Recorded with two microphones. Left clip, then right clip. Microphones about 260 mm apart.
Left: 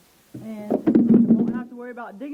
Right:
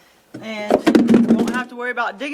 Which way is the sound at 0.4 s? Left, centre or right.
Centre.